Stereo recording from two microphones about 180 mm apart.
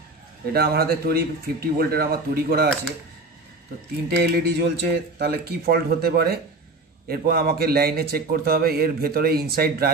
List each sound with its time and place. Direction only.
0.5 s a man's voice: 60° right (ahead or behind)
4.2 s a man's voice: 65° right (ahead or behind)